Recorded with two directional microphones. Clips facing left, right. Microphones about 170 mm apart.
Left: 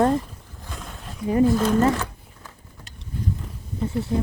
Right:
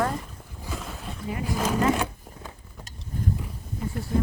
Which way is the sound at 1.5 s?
10° right (ahead or behind).